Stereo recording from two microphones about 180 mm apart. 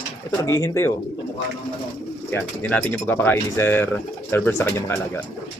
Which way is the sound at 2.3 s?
10° left (ahead or behind).